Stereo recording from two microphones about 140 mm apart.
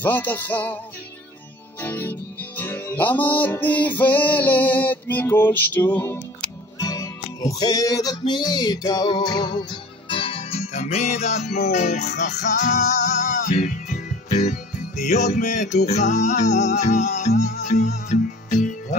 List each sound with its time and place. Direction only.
0.0 s music: 15° left (ahead or behind)
1.8 s music: 15° left (ahead or behind); by 18.9 s 65° left (ahead or behind)